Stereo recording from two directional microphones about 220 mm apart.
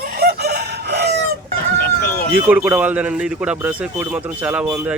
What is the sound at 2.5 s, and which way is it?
A man's voice, 5° right (ahead or behind).